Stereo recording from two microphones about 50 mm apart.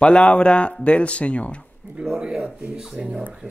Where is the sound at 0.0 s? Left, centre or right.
Left.